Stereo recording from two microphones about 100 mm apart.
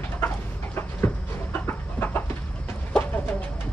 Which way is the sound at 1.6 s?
20° left (ahead or behind).